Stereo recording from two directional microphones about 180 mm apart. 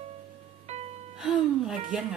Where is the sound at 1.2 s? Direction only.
Centre (ahead or behind).